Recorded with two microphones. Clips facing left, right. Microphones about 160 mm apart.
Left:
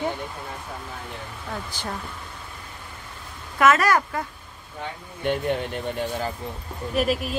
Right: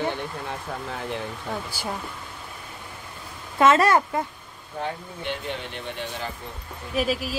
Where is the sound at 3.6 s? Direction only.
25° right (ahead or behind).